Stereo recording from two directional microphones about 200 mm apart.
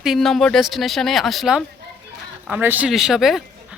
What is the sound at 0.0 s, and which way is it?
Speech, centre (ahead or behind).